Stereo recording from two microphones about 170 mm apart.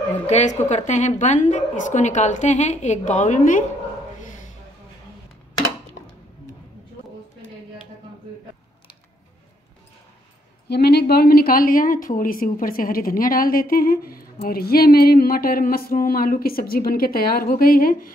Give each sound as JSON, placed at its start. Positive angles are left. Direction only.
{"t": 0.3, "sound": "a woman's voice", "side_deg": 40}
{"t": 10.7, "sound": "a woman's voice", "side_deg": 70}